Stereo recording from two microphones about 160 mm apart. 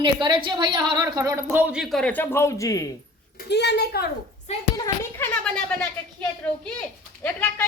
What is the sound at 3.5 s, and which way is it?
Speech, 90° left.